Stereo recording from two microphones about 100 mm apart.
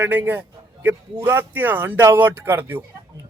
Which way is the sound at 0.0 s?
20° right (ahead or behind).